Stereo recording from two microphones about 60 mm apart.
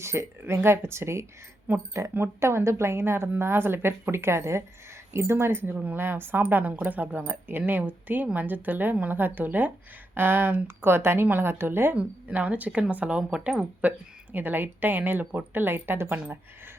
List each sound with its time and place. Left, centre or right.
0.0 s a woman's voice: right
5.6 s speech: right
11.9 s speech: right
14.3 s speech: right
16.0 s speech: right